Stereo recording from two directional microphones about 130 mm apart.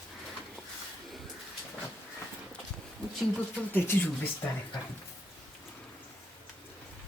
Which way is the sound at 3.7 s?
15° left (ahead or behind).